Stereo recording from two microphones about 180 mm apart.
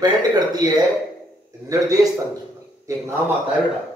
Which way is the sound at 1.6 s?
20° right (ahead or behind).